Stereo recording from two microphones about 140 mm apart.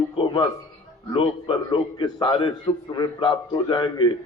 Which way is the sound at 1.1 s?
35° left (ahead or behind).